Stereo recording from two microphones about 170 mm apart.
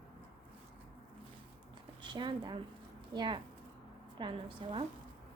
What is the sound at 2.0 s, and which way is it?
A woman's voice, 30° right (ahead or behind).